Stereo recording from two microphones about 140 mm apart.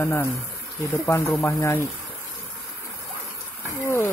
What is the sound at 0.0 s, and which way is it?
Speech, 15° left (ahead or behind).